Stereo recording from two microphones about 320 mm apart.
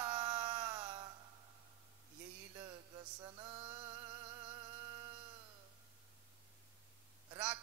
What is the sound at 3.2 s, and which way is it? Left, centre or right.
Mantra, centre.